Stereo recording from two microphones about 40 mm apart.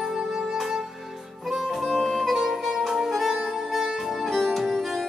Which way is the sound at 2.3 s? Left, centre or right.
Centre.